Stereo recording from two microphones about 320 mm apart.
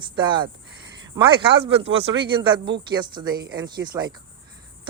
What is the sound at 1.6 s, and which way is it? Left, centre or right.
Speech, centre.